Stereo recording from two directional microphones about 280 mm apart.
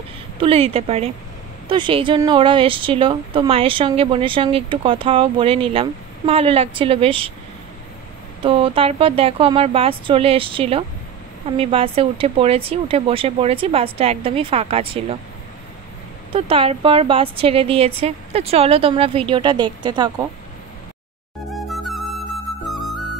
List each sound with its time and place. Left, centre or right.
0.4 s a woman's voice: centre
8.4 s a woman's voice: centre
16.3 s a woman's voice: centre
21.5 s music: centre